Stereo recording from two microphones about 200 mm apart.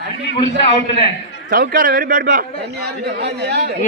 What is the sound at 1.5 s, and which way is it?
A man's voice, 45° right (ahead or behind).